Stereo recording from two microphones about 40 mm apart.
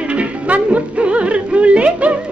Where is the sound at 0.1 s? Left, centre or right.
Right.